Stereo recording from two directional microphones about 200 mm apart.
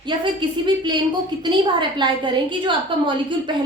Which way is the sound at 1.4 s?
25° right (ahead or behind).